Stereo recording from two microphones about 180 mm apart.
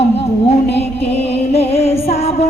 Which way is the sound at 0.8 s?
35° left (ahead or behind).